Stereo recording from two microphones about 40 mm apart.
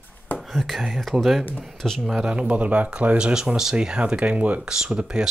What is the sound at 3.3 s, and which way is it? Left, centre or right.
Speech, centre.